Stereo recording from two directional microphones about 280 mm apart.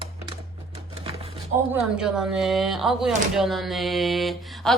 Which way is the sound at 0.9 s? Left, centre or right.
Centre.